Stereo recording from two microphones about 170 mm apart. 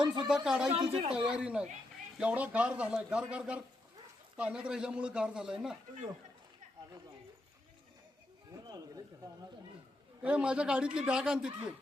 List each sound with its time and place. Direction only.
0.3 s a man's voice: 5° right (ahead or behind)
0.7 s a woman's voice: 30° right (ahead or behind)
1.1 s a man's voice: 5° right (ahead or behind)
8.6 s speech: 20° right (ahead or behind)
10.2 s a man's voice: 5° right (ahead or behind)